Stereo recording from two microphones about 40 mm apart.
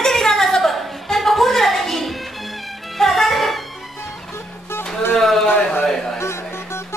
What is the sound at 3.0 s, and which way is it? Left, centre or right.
Music, centre.